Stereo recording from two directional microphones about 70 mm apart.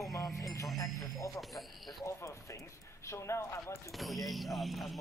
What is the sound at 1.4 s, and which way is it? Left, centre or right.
Speech, centre.